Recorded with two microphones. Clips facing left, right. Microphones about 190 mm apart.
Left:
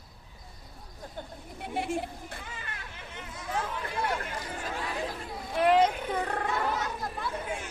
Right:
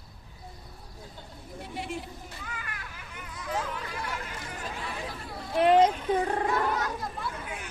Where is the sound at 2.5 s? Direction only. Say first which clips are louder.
Right 1 dB; 25° left (ahead or behind).